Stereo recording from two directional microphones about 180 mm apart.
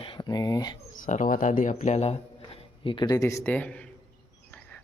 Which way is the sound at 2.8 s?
25° left (ahead or behind).